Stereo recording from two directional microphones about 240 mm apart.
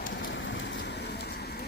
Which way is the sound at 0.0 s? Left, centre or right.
Left.